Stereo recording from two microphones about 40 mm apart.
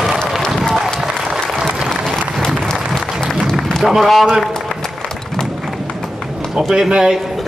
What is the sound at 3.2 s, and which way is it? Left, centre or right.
Applause, centre.